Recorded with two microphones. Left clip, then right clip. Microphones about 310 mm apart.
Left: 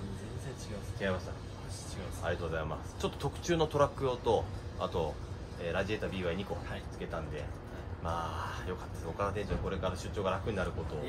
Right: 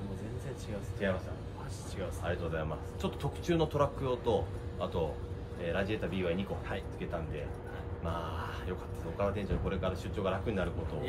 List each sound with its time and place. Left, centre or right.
1.0 s a man's voice: centre
2.3 s a man's voice: centre
8.1 s a man's voice: centre